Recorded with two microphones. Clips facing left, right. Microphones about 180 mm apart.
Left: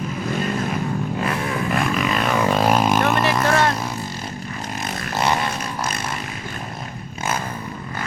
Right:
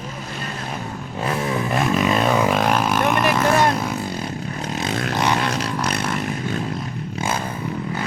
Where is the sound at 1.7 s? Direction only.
25° right (ahead or behind).